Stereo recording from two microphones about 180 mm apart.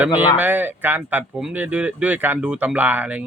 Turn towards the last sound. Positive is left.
turn(degrees=-10)  # may be behind; listen again after turning